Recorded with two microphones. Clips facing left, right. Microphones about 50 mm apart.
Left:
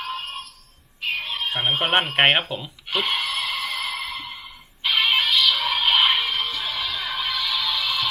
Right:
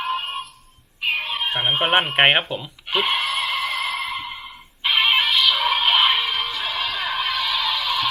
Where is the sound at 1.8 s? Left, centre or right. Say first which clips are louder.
Right 2 dB; centre.